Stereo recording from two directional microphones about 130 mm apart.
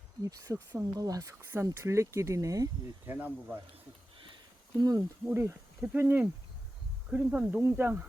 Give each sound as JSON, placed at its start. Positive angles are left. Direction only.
{"t": 0.5, "sound": "speech", "side_deg": -20}
{"t": 3.1, "sound": "speech", "side_deg": -15}
{"t": 4.8, "sound": "speech", "side_deg": -30}
{"t": 5.2, "sound": "speech", "side_deg": -15}